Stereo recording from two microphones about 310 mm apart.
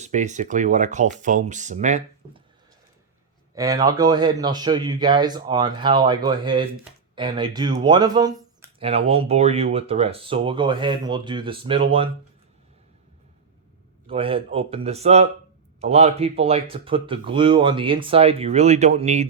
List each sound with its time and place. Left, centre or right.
0.0 s speech: right
3.5 s speech: centre
14.1 s speech: centre